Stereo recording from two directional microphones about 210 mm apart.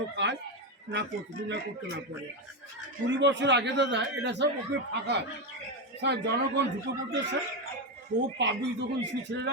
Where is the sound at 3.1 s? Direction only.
55° right (ahead or behind).